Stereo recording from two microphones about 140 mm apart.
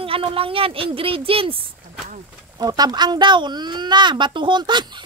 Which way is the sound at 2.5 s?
30° right (ahead or behind).